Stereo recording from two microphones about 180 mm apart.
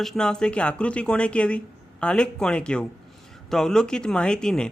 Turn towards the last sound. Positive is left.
turn(degrees=5)  # may be behind; listen again after turning